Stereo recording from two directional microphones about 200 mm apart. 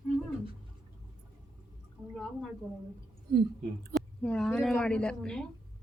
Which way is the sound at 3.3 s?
50° right (ahead or behind).